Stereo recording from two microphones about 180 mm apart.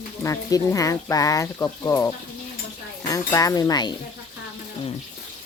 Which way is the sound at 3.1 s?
20° left (ahead or behind).